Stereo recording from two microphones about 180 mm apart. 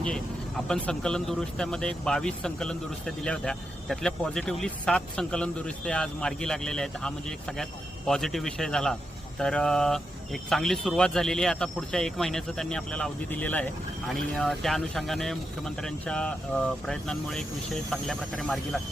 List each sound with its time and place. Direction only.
0.0 s speech: 5° left (ahead or behind)